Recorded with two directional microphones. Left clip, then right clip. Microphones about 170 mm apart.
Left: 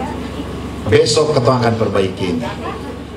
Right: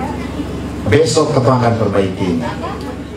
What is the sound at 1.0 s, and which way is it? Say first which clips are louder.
A man's voice: right 1 dB; 25° left (ahead or behind).